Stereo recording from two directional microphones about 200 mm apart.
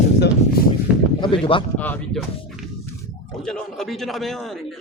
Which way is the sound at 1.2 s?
25° left (ahead or behind).